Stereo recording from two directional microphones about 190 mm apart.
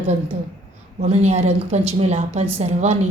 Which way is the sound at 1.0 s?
35° right (ahead or behind).